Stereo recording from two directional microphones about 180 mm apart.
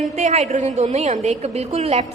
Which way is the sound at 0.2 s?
40° right (ahead or behind).